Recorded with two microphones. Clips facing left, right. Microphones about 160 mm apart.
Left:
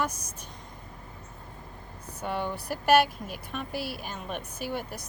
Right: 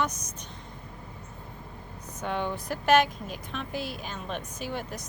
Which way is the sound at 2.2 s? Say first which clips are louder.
Right 1 dB; 10° left (ahead or behind).